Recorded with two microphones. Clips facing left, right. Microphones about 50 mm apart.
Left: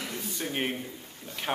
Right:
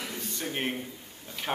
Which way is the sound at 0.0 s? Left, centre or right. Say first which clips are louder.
Left 1 dB; centre.